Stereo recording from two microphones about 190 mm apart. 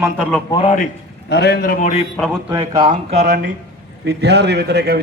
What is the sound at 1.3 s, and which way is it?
Speech, 60° left (ahead or behind).